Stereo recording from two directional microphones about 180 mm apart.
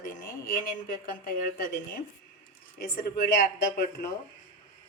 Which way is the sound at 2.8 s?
55° left (ahead or behind).